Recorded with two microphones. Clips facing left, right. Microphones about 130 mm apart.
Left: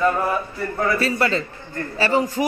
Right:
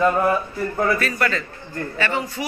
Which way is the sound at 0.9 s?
25° left (ahead or behind).